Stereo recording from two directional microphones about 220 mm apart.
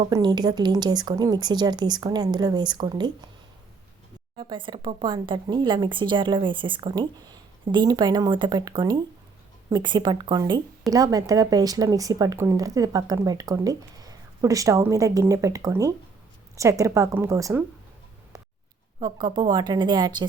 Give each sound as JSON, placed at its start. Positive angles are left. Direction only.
{"t": 0.1, "sound": "a woman's voice", "side_deg": -20}
{"t": 4.4, "sound": "a woman's voice", "side_deg": -20}
{"t": 18.9, "sound": "a woman's voice", "side_deg": -20}